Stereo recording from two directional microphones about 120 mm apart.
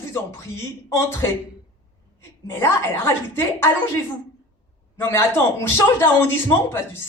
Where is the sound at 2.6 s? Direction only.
20° left (ahead or behind).